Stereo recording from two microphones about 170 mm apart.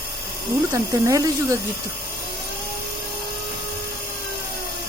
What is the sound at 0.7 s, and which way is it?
Speech, 20° right (ahead or behind).